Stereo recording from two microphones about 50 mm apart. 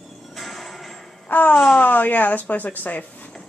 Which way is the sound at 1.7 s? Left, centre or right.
Left.